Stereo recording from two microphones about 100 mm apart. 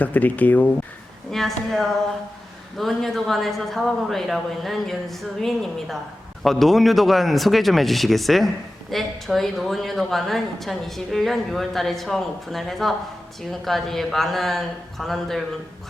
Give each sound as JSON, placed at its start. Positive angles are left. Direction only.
{"t": 0.0, "sound": "speech", "side_deg": 15}
{"t": 1.3, "sound": "a woman's voice", "side_deg": 5}